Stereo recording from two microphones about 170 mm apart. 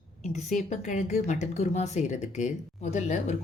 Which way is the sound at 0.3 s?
45° left (ahead or behind).